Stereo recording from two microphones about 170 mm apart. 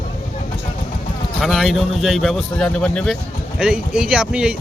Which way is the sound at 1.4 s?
Centre (ahead or behind).